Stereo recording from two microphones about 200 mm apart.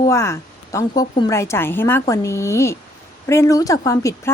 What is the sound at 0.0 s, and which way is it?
A woman's voice, 15° left (ahead or behind).